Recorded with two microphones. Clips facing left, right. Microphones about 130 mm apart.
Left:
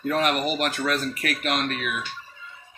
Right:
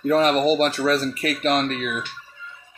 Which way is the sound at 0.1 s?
30° right (ahead or behind).